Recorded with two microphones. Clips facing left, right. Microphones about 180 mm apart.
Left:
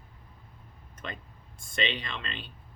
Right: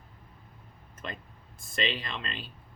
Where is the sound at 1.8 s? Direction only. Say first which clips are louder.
Even; centre (ahead or behind).